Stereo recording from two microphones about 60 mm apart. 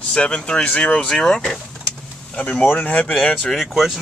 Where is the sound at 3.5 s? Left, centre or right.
Centre.